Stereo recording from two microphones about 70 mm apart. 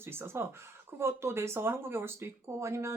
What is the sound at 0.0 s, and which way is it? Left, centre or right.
Speech, right.